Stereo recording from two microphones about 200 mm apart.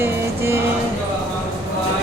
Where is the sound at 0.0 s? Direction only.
10° right (ahead or behind).